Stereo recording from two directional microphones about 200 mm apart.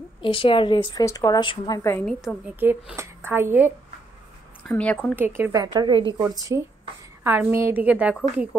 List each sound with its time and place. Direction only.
0.2 s a woman's voice: 25° left (ahead or behind)
2.0 s a woman's voice: 5° right (ahead or behind)
4.6 s speech: 5° left (ahead or behind)
5.1 s a woman's voice: 10° right (ahead or behind)
5.5 s a woman's voice: 20° right (ahead or behind)